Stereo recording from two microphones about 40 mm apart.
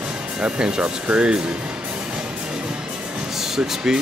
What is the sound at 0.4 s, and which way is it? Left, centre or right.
Speech, right.